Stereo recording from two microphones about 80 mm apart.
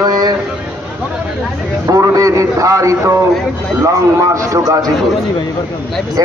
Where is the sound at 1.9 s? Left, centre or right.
Right.